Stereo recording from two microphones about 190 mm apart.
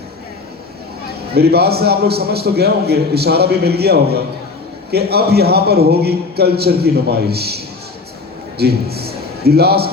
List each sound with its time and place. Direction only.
1.3 s a man's voice: 55° right (ahead or behind)